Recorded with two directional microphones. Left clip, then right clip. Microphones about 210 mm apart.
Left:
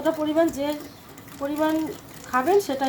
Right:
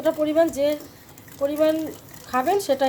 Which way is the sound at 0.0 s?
40° right (ahead or behind).